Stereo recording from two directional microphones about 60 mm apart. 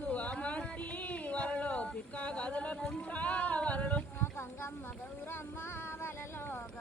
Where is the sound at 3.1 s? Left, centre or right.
Left.